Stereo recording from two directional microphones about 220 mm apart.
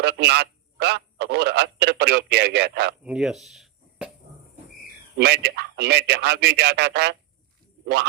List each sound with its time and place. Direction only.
0.0 s speech: 50° right (ahead or behind)
3.0 s speech: 5° right (ahead or behind)
5.1 s speech: 50° right (ahead or behind)